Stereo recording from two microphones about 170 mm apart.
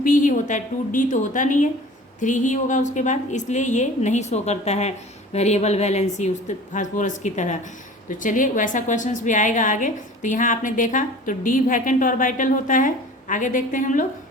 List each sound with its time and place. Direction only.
0.0 s a woman's voice: 50° left (ahead or behind)